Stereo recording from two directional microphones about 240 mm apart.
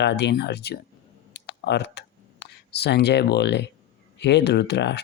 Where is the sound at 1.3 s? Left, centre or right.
Left.